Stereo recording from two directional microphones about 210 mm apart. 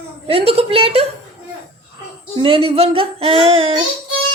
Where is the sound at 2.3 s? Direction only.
25° right (ahead or behind).